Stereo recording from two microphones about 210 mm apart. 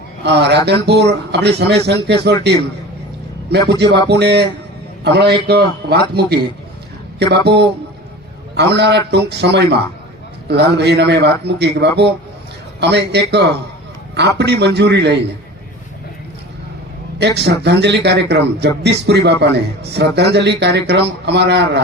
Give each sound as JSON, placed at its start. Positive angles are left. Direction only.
{"t": 0.2, "sound": "a man's voice", "side_deg": -50}
{"t": 4.1, "sound": "a man's voice", "side_deg": -50}
{"t": 17.2, "sound": "a man's voice", "side_deg": -55}